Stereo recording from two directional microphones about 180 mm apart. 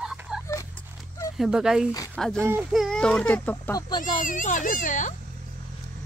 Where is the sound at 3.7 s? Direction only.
20° left (ahead or behind).